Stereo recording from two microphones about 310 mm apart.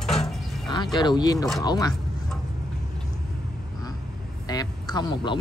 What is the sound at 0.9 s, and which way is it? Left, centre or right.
Speech, centre.